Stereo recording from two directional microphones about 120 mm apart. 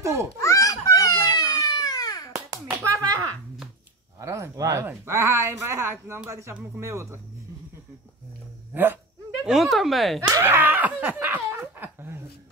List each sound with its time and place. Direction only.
0.0 s a child's voice: 25° right (ahead or behind)
0.4 s a sound: 25° left (ahead or behind)
2.3 s a sound: 25° right (ahead or behind)
4.2 s speech: 25° right (ahead or behind)
8.7 s speech: 15° right (ahead or behind)
9.5 s speech: centre (ahead or behind)
10.4 s laughter: 15° right (ahead or behind)